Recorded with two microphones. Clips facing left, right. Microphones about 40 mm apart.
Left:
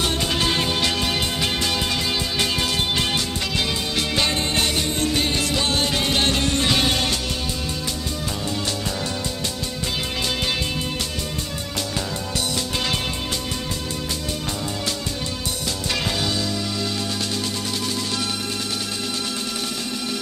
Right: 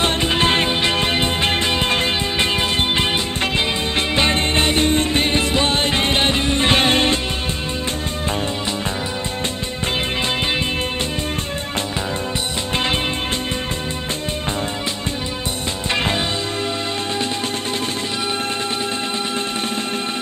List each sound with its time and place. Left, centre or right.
0.0 s music: right
15.9 s music: right